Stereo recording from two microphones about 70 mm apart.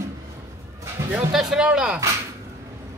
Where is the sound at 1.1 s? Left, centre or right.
Centre.